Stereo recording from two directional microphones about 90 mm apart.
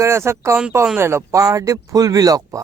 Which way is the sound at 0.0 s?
30° right (ahead or behind).